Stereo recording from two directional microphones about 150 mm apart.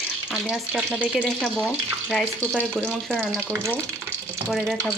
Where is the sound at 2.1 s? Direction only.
5° left (ahead or behind).